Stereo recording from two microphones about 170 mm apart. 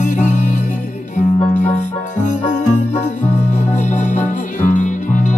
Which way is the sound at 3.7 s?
50° left (ahead or behind).